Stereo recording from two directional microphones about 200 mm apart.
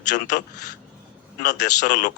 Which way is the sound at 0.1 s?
40° left (ahead or behind).